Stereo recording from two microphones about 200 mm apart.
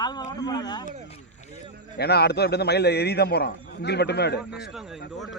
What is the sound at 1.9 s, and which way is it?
A man's voice, 55° left (ahead or behind).